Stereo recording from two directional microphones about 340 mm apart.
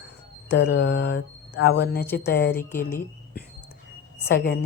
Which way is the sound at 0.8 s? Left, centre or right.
Left.